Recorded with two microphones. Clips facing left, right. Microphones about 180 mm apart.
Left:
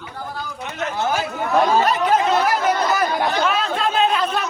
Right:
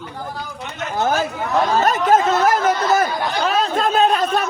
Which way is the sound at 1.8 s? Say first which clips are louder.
Right 2 dB; 45° right (ahead or behind).